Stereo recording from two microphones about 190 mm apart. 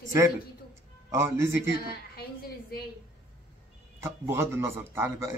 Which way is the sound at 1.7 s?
55° left (ahead or behind).